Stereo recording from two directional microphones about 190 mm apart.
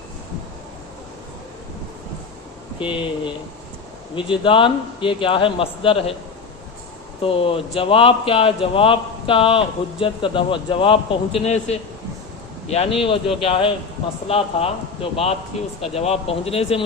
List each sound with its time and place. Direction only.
4.1 s speech: 25° left (ahead or behind)
7.2 s speech: 30° left (ahead or behind)